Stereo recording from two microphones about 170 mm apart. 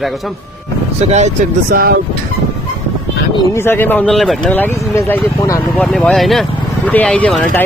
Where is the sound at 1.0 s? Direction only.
40° right (ahead or behind).